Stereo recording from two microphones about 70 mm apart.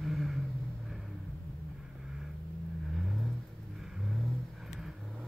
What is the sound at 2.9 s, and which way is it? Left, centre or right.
Vehicle, centre.